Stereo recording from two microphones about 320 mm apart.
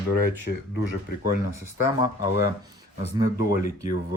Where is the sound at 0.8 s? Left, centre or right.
Left.